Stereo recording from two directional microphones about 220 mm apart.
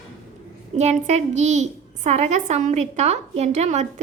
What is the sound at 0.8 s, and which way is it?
A woman's voice, 30° right (ahead or behind).